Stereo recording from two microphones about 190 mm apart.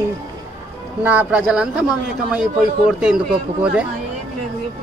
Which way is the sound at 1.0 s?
10° right (ahead or behind).